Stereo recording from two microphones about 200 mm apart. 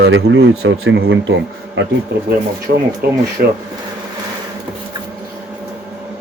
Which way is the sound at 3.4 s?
45° right (ahead or behind).